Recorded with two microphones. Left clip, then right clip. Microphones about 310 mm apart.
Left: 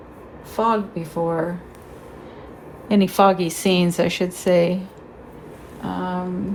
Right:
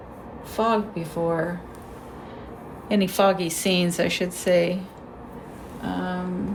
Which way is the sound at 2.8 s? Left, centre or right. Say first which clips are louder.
Left 4 dB; centre.